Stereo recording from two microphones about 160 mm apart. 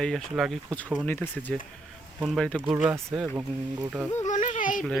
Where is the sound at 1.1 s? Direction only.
10° left (ahead or behind).